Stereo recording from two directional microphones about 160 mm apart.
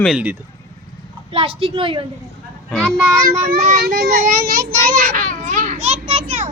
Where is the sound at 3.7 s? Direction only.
80° right; by 6.2 s 45° right (ahead or behind).